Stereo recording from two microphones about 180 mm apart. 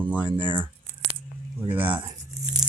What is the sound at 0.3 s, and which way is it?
Speech, 25° right (ahead or behind).